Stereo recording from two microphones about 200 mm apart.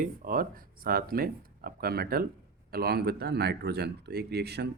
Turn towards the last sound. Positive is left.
turn(degrees=-55)  # may be behind; listen again after turning